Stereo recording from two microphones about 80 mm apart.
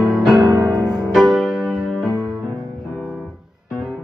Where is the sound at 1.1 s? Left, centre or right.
Centre.